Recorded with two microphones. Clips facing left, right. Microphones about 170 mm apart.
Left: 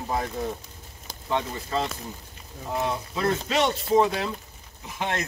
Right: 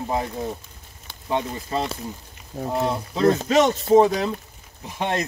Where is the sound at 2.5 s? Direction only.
75° right (ahead or behind).